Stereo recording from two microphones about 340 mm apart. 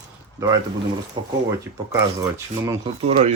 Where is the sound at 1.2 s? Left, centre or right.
Centre.